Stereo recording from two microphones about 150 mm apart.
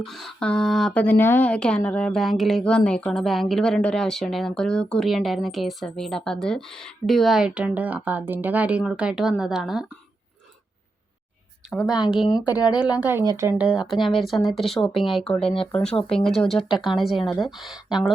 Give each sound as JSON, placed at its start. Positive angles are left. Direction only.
{"t": 0.0, "sound": "speech", "side_deg": 0}
{"t": 11.7, "sound": "speech", "side_deg": -5}
{"t": 12.2, "sound": "a woman's voice", "side_deg": 25}
{"t": 12.8, "sound": "a woman's voice", "side_deg": -10}
{"t": 13.6, "sound": "speech", "side_deg": -5}
{"t": 16.6, "sound": "speech", "side_deg": 35}
{"t": 17.2, "sound": "speech", "side_deg": 0}